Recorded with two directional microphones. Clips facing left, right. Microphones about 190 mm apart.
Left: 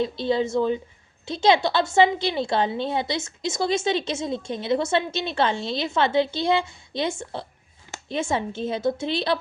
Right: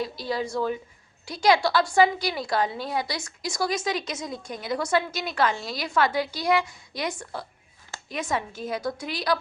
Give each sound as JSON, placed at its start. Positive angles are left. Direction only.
{"t": 0.0, "sound": "a woman's voice", "side_deg": 25}